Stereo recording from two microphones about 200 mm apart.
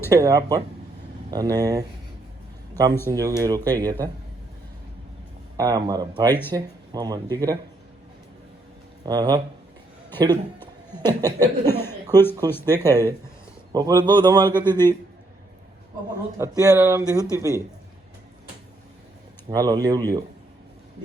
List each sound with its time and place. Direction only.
0.1 s speech: 15° right (ahead or behind)
3.1 s speech: 15° right (ahead or behind)
5.5 s speech: 20° right (ahead or behind)
9.0 s speech: 20° right (ahead or behind)
11.7 s speech: 10° left (ahead or behind)
13.7 s speech: 20° right (ahead or behind)
16.4 s speech: 15° right (ahead or behind)
19.5 s speech: 20° right (ahead or behind)